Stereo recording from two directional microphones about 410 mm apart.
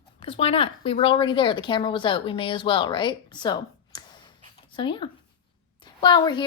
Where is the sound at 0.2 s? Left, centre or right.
Centre.